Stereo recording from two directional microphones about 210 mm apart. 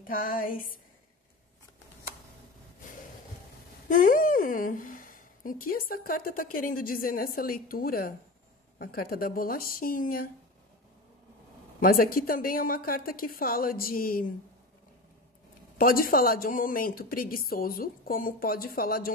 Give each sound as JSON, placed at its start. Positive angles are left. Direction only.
{"t": 0.0, "sound": "a sound", "side_deg": 40}
{"t": 3.9, "sound": "a woman's voice", "side_deg": 40}
{"t": 11.8, "sound": "a woman's voice", "side_deg": 45}
{"t": 15.8, "sound": "a woman's voice", "side_deg": 45}